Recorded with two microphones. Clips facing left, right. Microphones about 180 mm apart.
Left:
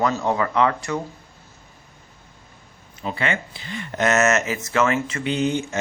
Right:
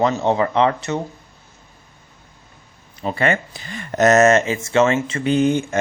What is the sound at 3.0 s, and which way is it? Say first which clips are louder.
Speech: right 5 dB; 45° right (ahead or behind).